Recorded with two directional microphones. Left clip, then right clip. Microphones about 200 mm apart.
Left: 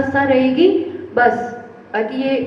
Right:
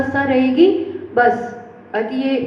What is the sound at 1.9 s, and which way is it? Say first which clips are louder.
Speech: left 1 dB; 55° right (ahead or behind).